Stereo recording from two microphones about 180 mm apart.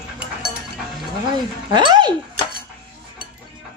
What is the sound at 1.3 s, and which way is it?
Speech, 25° right (ahead or behind).